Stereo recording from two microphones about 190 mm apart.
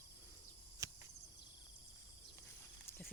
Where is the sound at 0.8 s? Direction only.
15° right (ahead or behind).